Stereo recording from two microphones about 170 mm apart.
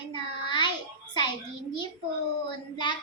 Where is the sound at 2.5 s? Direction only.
25° left (ahead or behind).